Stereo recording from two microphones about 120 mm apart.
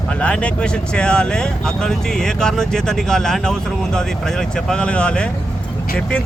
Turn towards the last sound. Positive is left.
turn(degrees=10)  # may be behind; listen again after turning